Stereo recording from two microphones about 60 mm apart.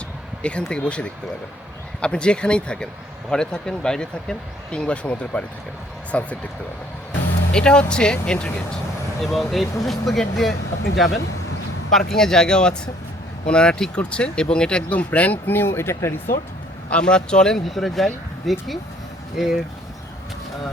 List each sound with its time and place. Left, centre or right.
0.4 s speech: centre
7.5 s speech: centre
9.2 s speech: centre; by 16.1 s left
16.9 s speech: centre